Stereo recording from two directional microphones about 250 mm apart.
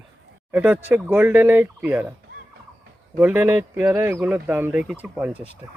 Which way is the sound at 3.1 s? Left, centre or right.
Centre.